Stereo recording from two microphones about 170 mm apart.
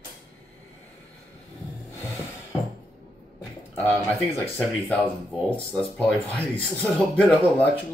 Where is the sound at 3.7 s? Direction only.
15° left (ahead or behind).